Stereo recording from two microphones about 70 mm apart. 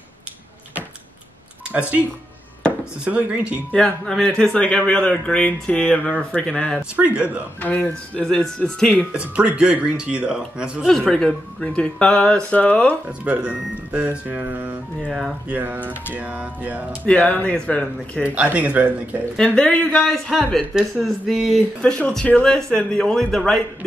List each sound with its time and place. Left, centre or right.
1.7 s speech: right
3.7 s speech: centre
7.0 s speech: right
7.6 s speech: left
8.2 s speech: centre
9.1 s speech: centre
10.9 s speech: centre
13.2 s speech: centre
15.0 s speech: centre
15.5 s speech: right
17.0 s speech: centre
18.3 s speech: right
19.3 s speech: centre
20.7 s speech: centre